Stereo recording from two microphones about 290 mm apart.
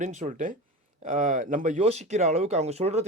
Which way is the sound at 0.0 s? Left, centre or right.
Right.